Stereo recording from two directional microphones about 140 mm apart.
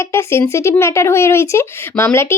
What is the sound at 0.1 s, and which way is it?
Speech, 20° left (ahead or behind).